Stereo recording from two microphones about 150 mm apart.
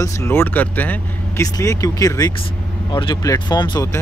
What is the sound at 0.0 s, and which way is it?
Speech, 15° left (ahead or behind).